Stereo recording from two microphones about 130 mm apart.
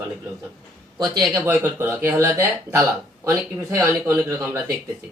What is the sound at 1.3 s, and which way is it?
Speech, 20° right (ahead or behind).